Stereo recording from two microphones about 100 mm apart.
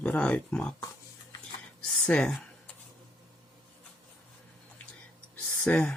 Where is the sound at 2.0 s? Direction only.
10° left (ahead or behind).